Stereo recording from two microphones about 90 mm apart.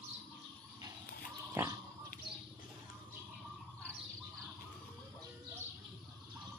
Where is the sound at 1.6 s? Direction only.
25° right (ahead or behind).